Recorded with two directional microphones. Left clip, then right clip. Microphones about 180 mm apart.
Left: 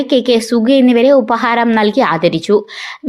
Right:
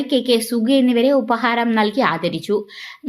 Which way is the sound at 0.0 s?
15° left (ahead or behind).